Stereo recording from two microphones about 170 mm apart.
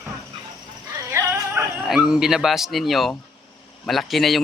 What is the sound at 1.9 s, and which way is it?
Speech, 5° right (ahead or behind).